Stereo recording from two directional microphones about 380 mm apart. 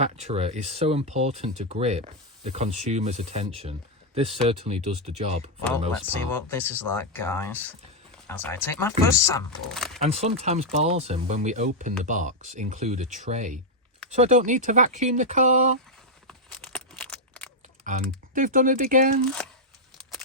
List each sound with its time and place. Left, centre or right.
0.0 s speech: centre
6.3 s speech: centre
10.0 s speech: centre
16.2 s a sound: centre
17.9 s typing: centre
18.3 s speech: right